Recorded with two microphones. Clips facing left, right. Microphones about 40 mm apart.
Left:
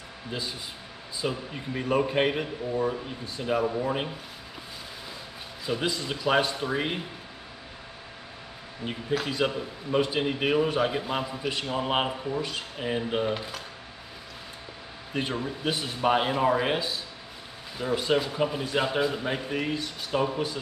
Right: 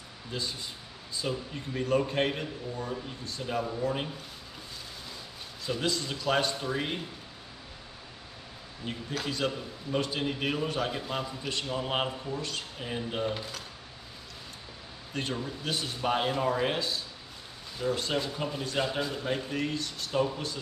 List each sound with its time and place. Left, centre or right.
0.3 s a man's voice: centre
5.7 s a man's voice: centre
8.8 s a man's voice: centre
15.1 s a man's voice: centre